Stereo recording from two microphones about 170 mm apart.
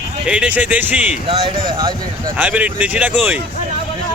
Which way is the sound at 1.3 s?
30° right (ahead or behind).